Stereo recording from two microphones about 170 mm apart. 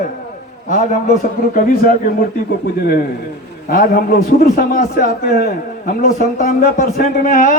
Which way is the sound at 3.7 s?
60° left (ahead or behind).